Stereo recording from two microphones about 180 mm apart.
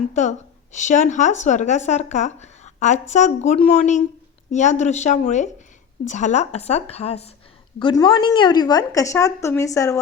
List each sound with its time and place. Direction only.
0.1 s a woman's voice: 40° left (ahead or behind); by 10.0 s 15° left (ahead or behind)